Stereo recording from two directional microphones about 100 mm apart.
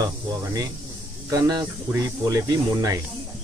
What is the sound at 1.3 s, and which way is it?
Speech, 40° right (ahead or behind).